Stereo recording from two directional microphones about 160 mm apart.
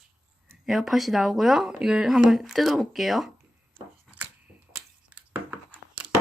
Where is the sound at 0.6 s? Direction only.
Centre (ahead or behind).